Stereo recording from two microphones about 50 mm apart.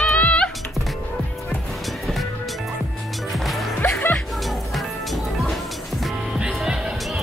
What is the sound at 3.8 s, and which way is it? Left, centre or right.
Music, left.